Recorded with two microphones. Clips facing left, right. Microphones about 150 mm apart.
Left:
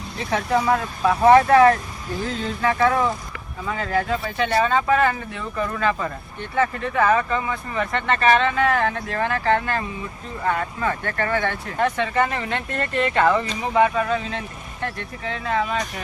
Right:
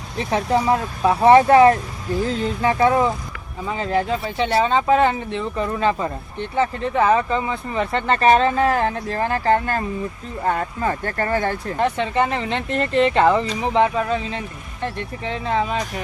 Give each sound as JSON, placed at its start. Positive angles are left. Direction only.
{"t": 0.3, "sound": "speech", "side_deg": -30}
{"t": 11.8, "sound": "speech", "side_deg": -25}
{"t": 15.2, "sound": "speech", "side_deg": -25}